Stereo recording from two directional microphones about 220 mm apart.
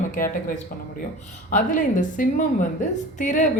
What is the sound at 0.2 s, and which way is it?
Speech, 40° left (ahead or behind).